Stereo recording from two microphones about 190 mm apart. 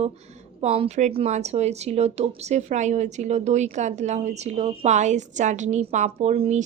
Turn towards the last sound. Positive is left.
turn(degrees=-35)  # may be behind; listen again after turning